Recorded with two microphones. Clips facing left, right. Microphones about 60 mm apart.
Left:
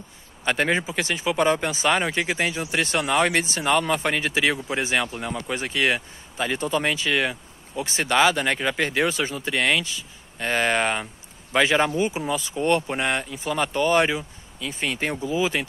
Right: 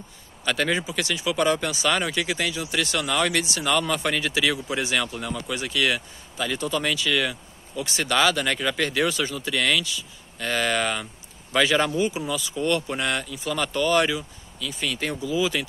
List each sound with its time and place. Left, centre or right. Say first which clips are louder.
0.5 s speech: left 2 dB; left